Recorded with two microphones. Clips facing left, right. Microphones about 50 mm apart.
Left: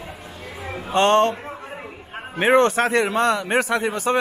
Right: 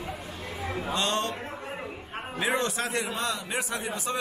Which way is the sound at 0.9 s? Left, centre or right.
Left.